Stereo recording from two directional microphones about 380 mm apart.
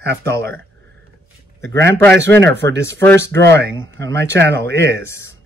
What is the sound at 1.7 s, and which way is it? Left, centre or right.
Speech, right.